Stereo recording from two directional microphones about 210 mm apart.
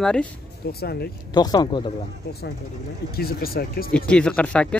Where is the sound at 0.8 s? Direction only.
50° left (ahead or behind).